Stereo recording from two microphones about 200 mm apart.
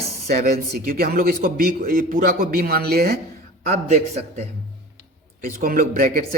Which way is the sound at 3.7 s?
35° right (ahead or behind).